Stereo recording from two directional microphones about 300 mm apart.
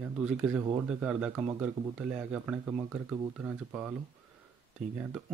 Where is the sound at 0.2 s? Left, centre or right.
Centre.